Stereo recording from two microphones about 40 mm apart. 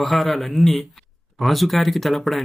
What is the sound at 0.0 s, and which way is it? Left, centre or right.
Speech, centre.